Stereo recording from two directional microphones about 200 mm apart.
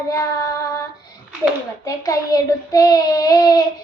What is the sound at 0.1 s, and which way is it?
Child singing, 15° left (ahead or behind).